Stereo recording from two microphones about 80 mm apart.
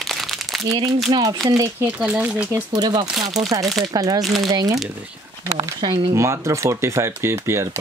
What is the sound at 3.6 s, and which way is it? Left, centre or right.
Speech, centre.